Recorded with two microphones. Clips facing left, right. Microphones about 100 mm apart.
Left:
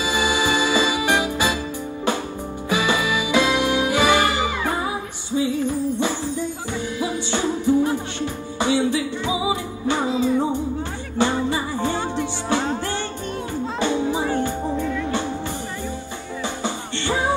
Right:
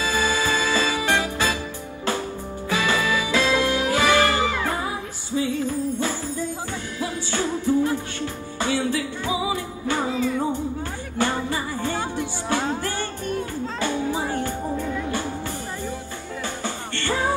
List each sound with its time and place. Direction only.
0.0 s music: 15° left (ahead or behind)
2.7 s music: 20° left (ahead or behind)
16.6 s music: 20° left (ahead or behind)